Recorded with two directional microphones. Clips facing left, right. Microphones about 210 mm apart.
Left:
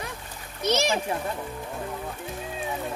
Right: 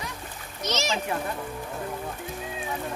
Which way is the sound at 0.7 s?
55° left (ahead or behind).